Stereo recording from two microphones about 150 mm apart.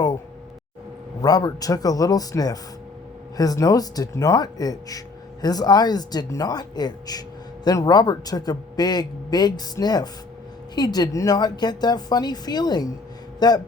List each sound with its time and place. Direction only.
1.2 s speech: 25° left (ahead or behind)